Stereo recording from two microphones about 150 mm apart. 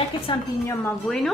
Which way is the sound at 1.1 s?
5° left (ahead or behind).